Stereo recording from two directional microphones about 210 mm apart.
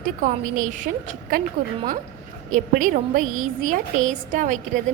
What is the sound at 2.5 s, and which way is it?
A woman's voice, 40° right (ahead or behind).